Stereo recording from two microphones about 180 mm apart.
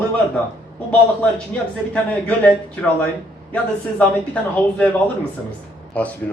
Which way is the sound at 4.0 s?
10° left (ahead or behind).